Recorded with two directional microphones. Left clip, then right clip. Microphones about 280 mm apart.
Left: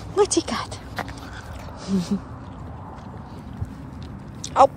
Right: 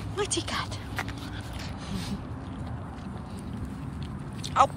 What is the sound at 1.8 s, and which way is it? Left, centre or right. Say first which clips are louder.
Speech: left 12 dB; centre.